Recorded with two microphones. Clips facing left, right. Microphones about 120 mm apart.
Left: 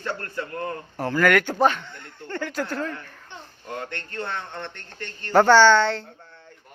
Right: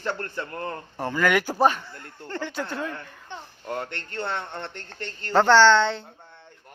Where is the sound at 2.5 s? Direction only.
Centre (ahead or behind).